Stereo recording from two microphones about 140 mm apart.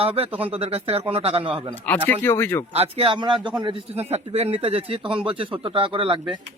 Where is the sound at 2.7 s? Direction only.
45° right (ahead or behind).